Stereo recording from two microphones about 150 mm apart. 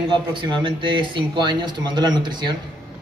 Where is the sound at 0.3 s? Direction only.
30° right (ahead or behind).